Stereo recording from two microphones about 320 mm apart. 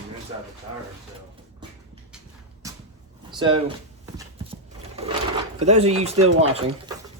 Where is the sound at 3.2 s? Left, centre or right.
Centre.